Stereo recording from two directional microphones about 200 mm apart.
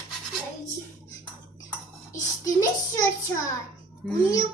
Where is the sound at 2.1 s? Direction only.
15° left (ahead or behind).